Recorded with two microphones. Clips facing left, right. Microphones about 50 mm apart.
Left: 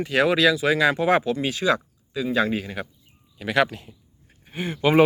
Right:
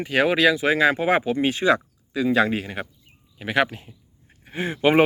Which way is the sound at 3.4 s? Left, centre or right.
Right.